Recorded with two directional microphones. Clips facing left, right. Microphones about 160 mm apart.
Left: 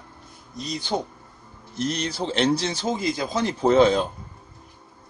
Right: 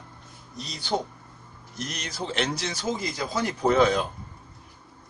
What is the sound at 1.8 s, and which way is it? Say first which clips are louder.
Speech: left 8 dB; 30° left (ahead or behind).